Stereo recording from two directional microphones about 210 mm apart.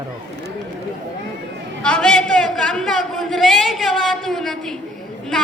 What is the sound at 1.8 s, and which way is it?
A woman's voice, 5° left (ahead or behind).